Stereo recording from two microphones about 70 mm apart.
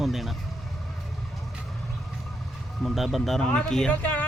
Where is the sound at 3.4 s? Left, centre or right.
Centre.